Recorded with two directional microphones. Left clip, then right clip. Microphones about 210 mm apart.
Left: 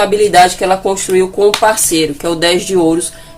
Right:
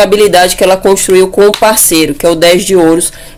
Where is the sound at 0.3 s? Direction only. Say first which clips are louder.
Right 2 dB; 40° right (ahead or behind).